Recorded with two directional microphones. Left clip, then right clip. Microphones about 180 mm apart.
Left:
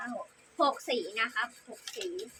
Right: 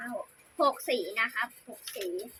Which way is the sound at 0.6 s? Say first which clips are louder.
Right 1 dB; 15° left (ahead or behind).